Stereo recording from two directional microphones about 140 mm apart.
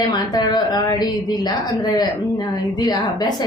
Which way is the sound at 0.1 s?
30° left (ahead or behind).